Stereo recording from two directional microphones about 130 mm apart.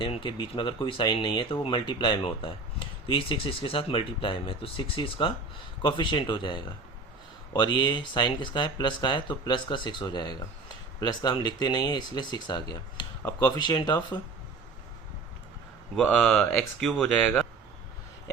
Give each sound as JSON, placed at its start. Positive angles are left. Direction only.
{"t": 0.0, "sound": "speech", "side_deg": 40}
{"t": 16.0, "sound": "speech", "side_deg": 5}